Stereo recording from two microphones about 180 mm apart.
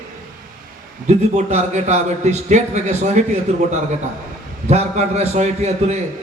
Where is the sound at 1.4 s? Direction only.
40° right (ahead or behind).